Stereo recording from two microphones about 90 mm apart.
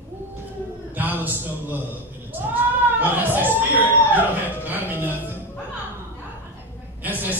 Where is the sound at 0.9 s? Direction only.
20° right (ahead or behind).